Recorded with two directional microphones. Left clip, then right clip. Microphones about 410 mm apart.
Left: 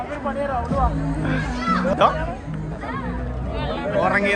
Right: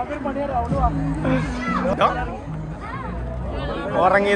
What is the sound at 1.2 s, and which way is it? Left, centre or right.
Speech, centre.